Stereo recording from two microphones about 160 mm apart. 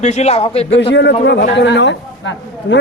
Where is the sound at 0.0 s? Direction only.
45° left (ahead or behind).